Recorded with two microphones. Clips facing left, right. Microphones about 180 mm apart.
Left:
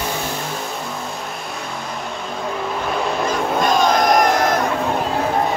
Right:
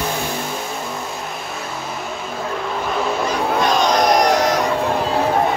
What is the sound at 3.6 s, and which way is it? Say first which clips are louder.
Crowd: left 1 dB; 50° left (ahead or behind).